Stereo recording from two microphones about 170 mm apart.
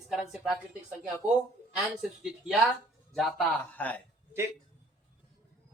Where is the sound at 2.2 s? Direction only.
5° right (ahead or behind).